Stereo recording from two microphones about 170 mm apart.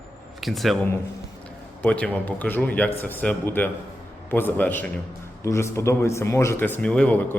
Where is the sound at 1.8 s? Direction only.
10° left (ahead or behind).